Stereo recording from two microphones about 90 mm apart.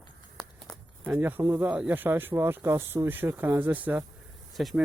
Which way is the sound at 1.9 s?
20° right (ahead or behind).